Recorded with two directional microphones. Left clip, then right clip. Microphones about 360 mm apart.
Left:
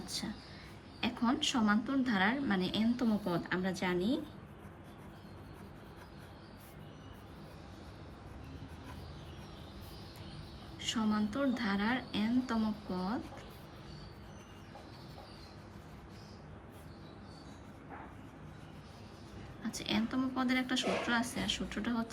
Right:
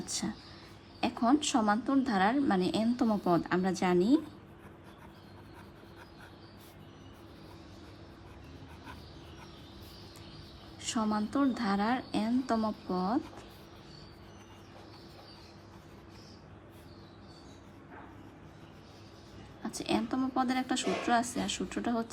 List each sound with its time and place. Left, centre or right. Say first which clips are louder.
0.0 s a woman's voice: right 3 dB; centre
10.8 s a woman's voice: right 2 dB; centre
19.6 s a woman's voice: right 4 dB; centre